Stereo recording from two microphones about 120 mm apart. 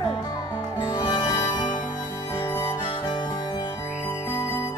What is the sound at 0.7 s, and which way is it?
Music, 40° left (ahead or behind).